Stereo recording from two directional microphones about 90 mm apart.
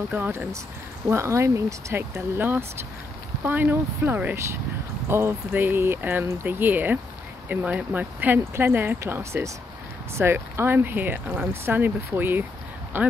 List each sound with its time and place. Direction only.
0.1 s speech: 20° right (ahead or behind)